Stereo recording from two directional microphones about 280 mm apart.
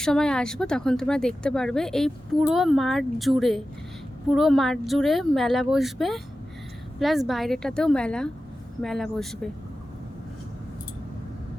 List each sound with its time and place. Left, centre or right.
0.0 s speech: centre